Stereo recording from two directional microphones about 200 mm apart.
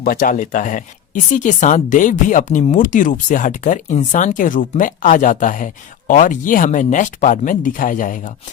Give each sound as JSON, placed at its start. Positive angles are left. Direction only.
{"t": 0.0, "sound": "speech", "side_deg": 45}